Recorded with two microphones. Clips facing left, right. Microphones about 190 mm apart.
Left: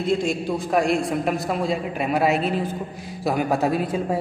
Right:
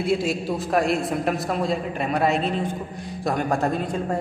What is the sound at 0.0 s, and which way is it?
A man's voice, 5° right (ahead or behind).